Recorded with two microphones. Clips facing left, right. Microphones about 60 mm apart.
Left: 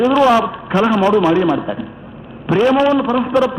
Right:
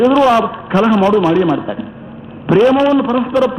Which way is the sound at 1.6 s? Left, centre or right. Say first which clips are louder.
Right 1 dB; centre.